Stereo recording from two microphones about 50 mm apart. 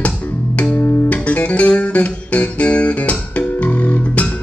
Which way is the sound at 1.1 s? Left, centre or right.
Left.